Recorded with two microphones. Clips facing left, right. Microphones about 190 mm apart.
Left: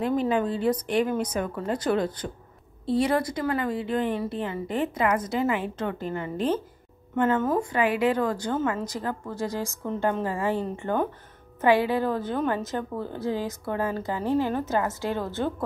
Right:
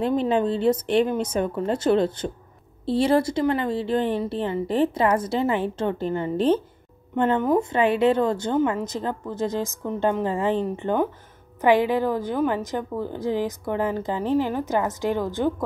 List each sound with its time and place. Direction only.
0.0 s a woman's voice: 25° right (ahead or behind)